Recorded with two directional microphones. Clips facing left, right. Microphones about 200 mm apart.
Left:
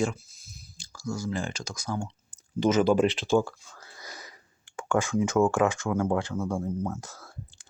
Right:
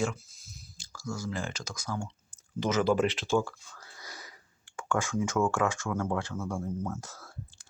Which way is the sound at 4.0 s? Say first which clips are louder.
Left 3 dB; 20° left (ahead or behind).